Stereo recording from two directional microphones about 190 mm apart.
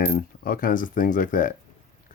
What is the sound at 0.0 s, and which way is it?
Mechanisms, 55° left (ahead or behind).